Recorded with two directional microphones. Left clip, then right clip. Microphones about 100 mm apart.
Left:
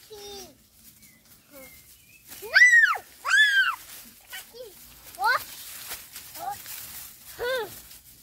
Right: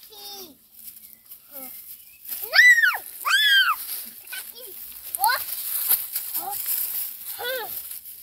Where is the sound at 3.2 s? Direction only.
15° left (ahead or behind).